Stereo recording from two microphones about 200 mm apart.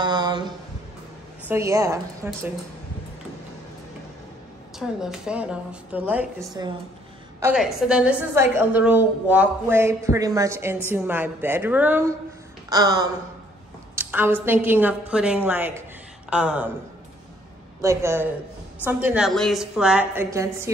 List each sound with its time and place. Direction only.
0.0 s a sound: 20° right (ahead or behind)
1.5 s a woman's voice: 15° right (ahead or behind)
4.7 s a woman's voice: 5° right (ahead or behind)
6.6 s a woman's voice: 20° right (ahead or behind)
17.8 s a woman's voice: 10° right (ahead or behind)